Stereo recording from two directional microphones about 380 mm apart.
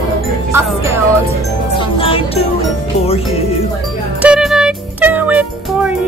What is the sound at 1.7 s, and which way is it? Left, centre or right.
Music, centre.